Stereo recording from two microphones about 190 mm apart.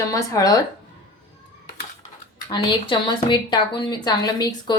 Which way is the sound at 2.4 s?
25° left (ahead or behind).